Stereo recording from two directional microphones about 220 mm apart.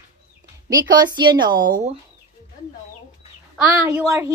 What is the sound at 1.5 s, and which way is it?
Speech, 40° right (ahead or behind).